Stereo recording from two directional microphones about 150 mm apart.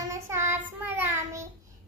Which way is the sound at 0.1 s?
20° right (ahead or behind).